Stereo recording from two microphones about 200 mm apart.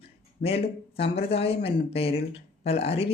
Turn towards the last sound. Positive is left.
turn(degrees=30)  # may be behind; listen again after turning